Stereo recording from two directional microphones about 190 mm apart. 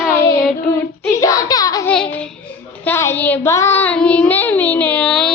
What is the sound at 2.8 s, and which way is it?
Child singing, 10° left (ahead or behind).